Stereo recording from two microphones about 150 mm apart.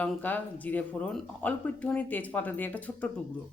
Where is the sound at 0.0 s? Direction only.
10° left (ahead or behind).